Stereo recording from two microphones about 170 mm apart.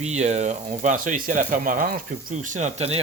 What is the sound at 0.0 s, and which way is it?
Speech, 40° right (ahead or behind).